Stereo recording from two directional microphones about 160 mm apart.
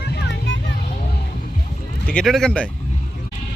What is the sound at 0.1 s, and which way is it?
Vehicle, 90° left.